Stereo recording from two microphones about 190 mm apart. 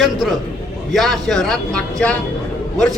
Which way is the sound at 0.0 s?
Centre (ahead or behind).